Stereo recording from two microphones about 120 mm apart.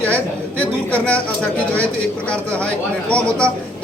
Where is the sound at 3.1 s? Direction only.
10° left (ahead or behind).